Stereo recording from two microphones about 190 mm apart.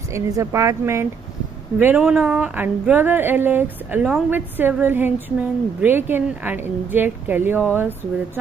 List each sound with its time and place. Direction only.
0.1 s speech: 15° right (ahead or behind)